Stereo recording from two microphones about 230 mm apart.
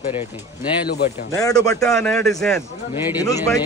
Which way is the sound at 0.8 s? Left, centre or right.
Left.